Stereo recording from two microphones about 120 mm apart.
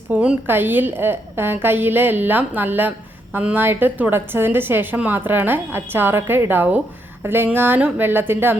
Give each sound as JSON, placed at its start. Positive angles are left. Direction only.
{"t": 0.1, "sound": "a woman's voice", "side_deg": -10}